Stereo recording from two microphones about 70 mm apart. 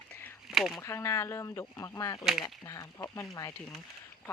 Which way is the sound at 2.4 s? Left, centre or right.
Left.